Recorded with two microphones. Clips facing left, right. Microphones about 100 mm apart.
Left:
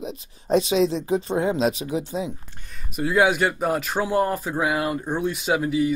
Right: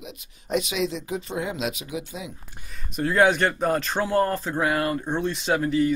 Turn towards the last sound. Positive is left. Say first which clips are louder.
# even
turn(degrees=10)  # may be behind; listen again after turning